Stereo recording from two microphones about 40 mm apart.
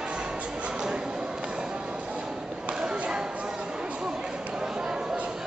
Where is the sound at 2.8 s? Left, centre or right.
Right.